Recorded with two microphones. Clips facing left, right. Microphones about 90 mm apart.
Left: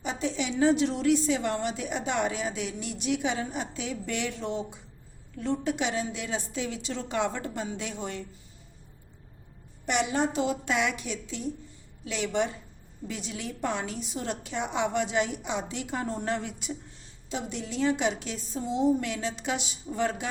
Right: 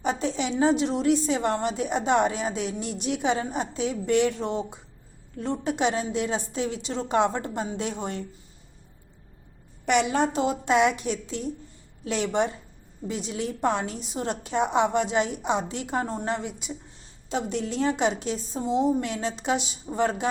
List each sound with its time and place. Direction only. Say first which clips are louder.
0.0 s a sound: right 4 dB; 45° right (ahead or behind)
0.5 s a woman's voice: right 1 dB; 25° right (ahead or behind)
1.4 s a woman's voice: right 4 dB; 35° right (ahead or behind)
9.8 s a woman's voice: right 5 dB; 85° right
10.3 s a woman's voice: right 5 dB; 30° right (ahead or behind); by 16.7 s 10° right (ahead or behind)
17.2 s a woman's voice: right 6 dB; 45° right (ahead or behind)